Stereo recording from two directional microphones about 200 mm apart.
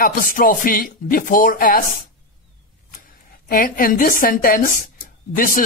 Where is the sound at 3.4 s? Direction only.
45° left (ahead or behind).